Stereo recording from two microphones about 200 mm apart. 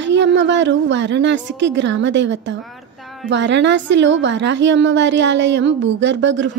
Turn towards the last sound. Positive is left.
turn(degrees=-65)  # may be behind; listen again after turning